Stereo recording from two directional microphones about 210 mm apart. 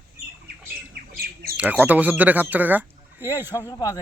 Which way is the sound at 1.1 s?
45° right (ahead or behind).